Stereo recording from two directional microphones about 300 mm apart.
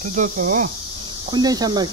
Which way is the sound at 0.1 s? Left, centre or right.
Right.